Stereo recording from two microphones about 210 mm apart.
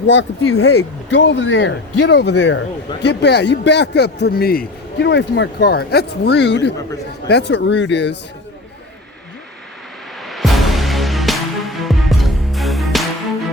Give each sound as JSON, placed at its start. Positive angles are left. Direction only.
{"t": 0.1, "sound": "speech", "side_deg": 70}
{"t": 1.1, "sound": "speech", "side_deg": 60}
{"t": 10.2, "sound": "music", "side_deg": 0}